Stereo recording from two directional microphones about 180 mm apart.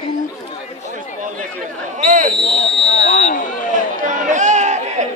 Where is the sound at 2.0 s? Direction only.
45° right (ahead or behind).